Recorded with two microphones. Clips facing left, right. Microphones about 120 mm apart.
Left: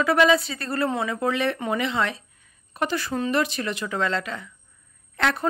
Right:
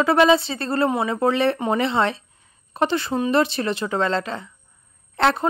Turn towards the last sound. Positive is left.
turn(degrees=-30)  # may be behind; listen again after turning